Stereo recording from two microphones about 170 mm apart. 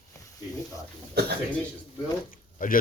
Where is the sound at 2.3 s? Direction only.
55° left (ahead or behind).